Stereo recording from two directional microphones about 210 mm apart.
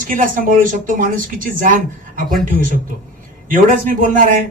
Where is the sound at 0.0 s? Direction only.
40° right (ahead or behind).